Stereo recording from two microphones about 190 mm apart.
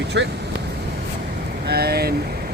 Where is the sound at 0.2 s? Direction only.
70° right (ahead or behind).